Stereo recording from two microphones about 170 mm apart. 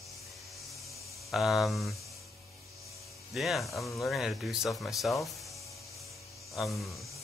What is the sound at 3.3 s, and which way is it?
Speech, centre (ahead or behind).